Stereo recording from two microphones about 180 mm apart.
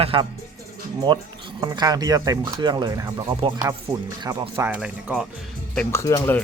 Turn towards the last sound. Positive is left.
turn(degrees=15)  # may be behind; listen again after turning